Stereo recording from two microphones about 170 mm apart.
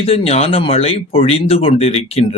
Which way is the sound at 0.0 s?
35° left (ahead or behind).